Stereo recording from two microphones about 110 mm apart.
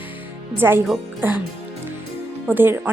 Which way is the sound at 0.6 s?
20° right (ahead or behind).